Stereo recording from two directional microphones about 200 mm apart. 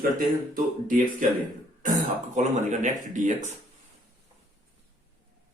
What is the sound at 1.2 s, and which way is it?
Speech, 40° right (ahead or behind).